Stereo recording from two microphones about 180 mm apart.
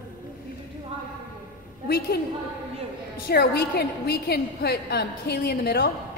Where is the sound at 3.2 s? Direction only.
60° left (ahead or behind).